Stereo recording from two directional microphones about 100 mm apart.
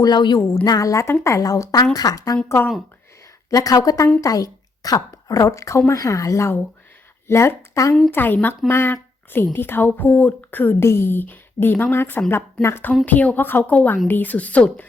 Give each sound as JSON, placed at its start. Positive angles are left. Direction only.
{"t": 0.0, "sound": "speech", "side_deg": 45}
{"t": 3.5, "sound": "a woman's voice", "side_deg": 35}
{"t": 8.1, "sound": "a woman's voice", "side_deg": 20}